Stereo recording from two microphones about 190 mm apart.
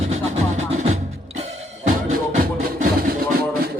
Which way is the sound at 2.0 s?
45° right (ahead or behind).